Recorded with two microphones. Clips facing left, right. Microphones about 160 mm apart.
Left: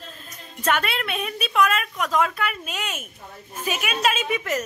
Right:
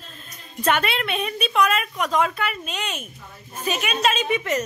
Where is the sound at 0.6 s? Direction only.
Centre (ahead or behind).